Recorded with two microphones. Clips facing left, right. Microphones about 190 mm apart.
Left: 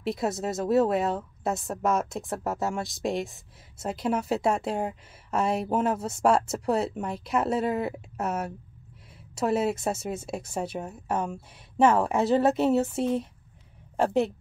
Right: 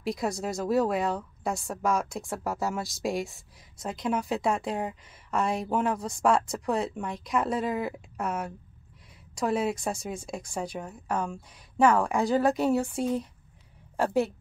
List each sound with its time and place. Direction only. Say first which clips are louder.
0.0 s speech: left 2 dB; centre (ahead or behind)
12.4 s speech: left 2 dB; 25° left (ahead or behind)